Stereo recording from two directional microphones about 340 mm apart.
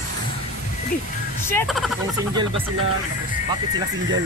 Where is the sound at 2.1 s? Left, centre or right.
Centre.